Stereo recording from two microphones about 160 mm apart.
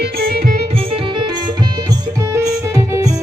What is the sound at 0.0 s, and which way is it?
Music, 75° right (ahead or behind).